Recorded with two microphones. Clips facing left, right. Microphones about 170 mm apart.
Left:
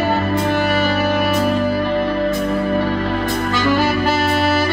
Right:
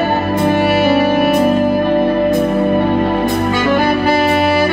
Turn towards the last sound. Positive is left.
turn(degrees=-55)  # may be behind; listen again after turning